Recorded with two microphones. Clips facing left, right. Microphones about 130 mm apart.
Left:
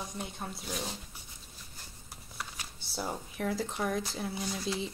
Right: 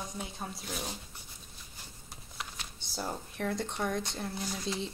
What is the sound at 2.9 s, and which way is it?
Speech, centre (ahead or behind).